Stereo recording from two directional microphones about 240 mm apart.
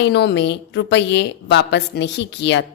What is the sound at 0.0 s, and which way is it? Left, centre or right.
A woman's voice, left.